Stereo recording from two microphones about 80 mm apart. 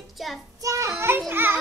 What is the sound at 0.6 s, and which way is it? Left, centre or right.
Speech, right.